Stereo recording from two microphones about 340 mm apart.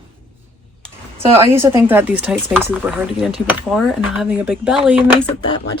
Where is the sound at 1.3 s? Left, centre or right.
Centre.